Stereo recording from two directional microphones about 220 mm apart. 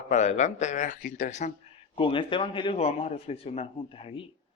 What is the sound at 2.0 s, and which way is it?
A man's voice, 20° left (ahead or behind).